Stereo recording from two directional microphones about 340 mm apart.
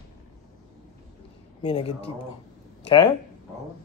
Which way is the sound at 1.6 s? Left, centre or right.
Centre.